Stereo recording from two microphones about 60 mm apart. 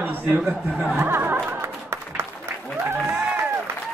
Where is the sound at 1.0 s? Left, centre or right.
Right.